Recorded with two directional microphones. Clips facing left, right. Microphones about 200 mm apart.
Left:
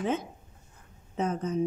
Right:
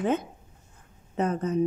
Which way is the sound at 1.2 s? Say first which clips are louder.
Right 3 dB; 60° right (ahead or behind).